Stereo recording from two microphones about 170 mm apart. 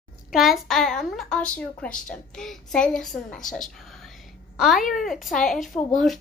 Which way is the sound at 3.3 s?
50° left (ahead or behind).